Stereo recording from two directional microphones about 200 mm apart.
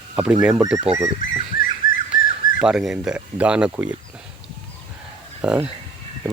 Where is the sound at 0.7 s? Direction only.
5° right (ahead or behind).